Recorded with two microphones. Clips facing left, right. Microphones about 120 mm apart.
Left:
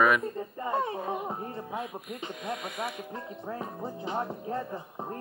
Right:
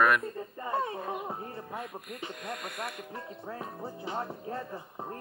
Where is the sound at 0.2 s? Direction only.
20° left (ahead or behind).